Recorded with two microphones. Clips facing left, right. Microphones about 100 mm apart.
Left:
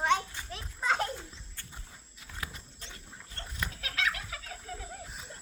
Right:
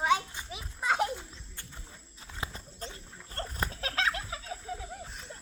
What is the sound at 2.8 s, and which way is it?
Dog, 40° right (ahead or behind).